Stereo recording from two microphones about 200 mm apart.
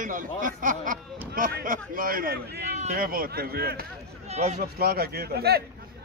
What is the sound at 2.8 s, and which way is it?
Speech, 40° right (ahead or behind).